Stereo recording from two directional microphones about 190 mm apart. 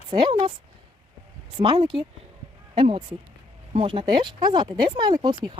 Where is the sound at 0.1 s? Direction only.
25° right (ahead or behind).